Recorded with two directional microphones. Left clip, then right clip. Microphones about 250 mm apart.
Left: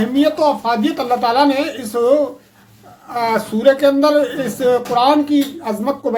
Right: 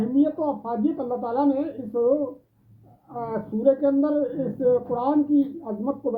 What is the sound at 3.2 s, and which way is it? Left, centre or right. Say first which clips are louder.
Speech: left 12 dB; centre.